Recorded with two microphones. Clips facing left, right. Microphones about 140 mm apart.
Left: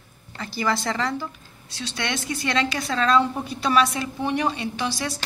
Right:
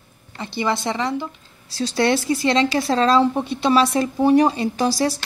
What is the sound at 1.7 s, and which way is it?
A woman's voice, 35° right (ahead or behind).